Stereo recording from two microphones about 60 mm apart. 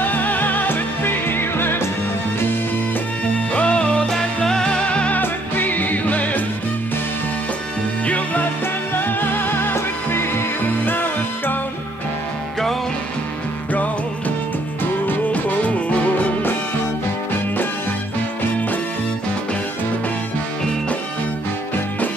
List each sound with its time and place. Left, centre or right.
0.0 s music: left
3.5 s music: centre
5.2 s music: left
8.0 s music: left
8.9 s music: left